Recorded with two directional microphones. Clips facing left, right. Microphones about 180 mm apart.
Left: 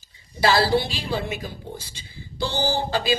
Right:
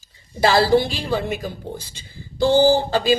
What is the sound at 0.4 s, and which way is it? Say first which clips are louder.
A woman's voice: right 4 dB; 50° right (ahead or behind).